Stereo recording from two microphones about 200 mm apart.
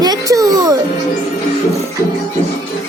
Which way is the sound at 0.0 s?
20° right (ahead or behind).